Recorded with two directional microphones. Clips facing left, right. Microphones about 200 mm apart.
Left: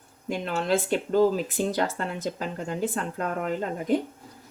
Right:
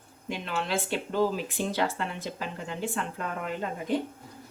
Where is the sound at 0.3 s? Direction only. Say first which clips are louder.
Left 6 dB; 45° left (ahead or behind).